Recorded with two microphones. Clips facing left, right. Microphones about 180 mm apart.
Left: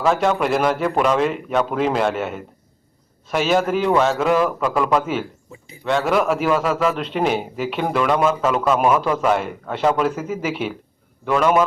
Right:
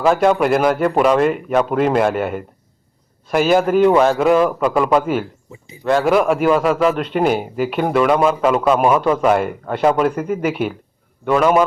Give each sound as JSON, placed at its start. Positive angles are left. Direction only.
{"t": 0.0, "sound": "speech", "side_deg": -5}
{"t": 5.5, "sound": "speech", "side_deg": -20}
{"t": 6.1, "sound": "speech", "side_deg": 0}